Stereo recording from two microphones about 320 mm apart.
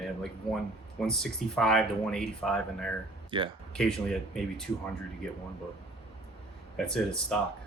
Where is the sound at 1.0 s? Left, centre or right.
Centre.